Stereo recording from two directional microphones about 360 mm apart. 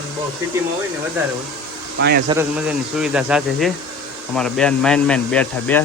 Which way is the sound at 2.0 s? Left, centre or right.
Right.